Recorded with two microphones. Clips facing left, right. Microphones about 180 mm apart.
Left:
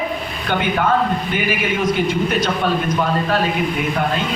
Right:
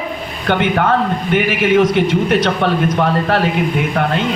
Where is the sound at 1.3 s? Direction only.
70° right (ahead or behind).